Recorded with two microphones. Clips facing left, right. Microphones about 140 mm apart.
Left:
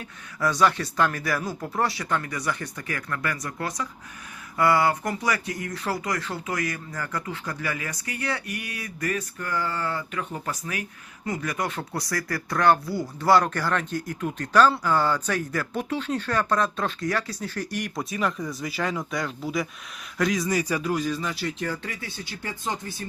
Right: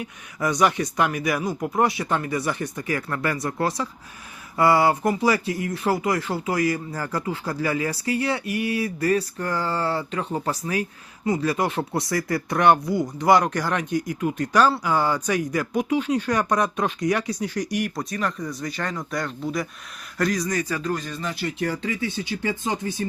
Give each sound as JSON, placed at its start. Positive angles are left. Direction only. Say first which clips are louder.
{"t": 0.0, "sound": "speech", "louder": "right 1 dB", "side_deg": -20}
{"t": 17.9, "sound": "speech", "louder": "even", "side_deg": 0}
{"t": 21.7, "sound": "speech", "louder": "right 6 dB", "side_deg": -20}